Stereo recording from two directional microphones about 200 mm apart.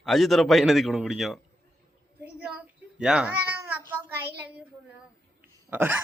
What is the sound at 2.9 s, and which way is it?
Cat, 5° right (ahead or behind).